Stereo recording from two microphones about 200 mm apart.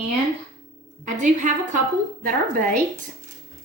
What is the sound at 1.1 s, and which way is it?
A woman's voice, 40° right (ahead or behind).